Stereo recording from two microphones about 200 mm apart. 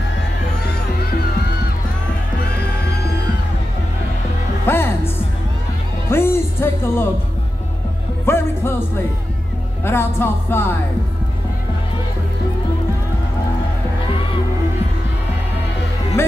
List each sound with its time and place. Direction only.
4.6 s music: 10° left (ahead or behind)
8.3 s speech: 10° left (ahead or behind)
9.8 s speech: 10° left (ahead or behind)